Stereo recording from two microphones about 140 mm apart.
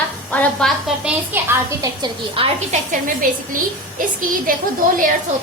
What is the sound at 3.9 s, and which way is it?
Speech, 80° right.